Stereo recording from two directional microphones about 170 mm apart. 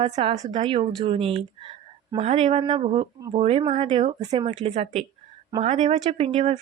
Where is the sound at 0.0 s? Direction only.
35° right (ahead or behind).